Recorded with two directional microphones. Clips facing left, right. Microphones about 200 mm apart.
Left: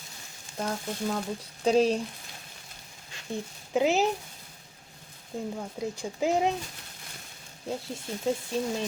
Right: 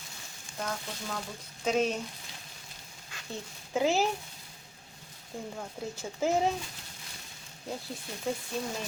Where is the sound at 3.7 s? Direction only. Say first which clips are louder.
Left 3 dB; 20° left (ahead or behind).